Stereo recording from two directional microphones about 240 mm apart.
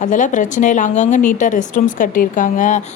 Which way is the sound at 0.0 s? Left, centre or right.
Left.